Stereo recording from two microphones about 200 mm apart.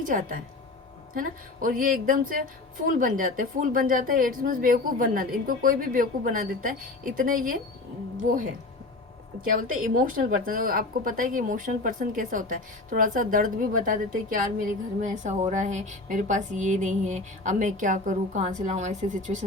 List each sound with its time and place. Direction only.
0.0 s speech: 45° right (ahead or behind)
9.4 s a woman's voice: 45° right (ahead or behind)